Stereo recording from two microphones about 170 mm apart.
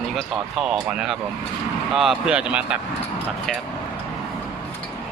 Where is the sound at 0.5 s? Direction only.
Centre (ahead or behind).